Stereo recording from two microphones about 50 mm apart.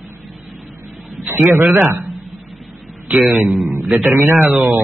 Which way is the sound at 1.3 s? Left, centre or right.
Right.